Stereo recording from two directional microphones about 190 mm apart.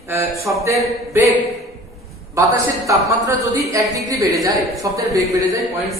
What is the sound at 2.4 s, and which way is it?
Speech, 15° right (ahead or behind).